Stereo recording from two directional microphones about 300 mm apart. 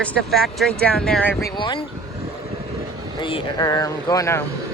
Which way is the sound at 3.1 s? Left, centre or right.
Centre.